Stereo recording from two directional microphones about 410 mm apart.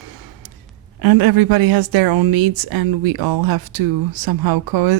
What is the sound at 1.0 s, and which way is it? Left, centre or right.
Speech, right.